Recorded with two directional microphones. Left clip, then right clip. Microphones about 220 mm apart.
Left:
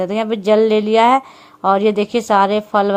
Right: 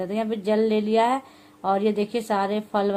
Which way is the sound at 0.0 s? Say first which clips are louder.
Left 8 dB; 25° left (ahead or behind).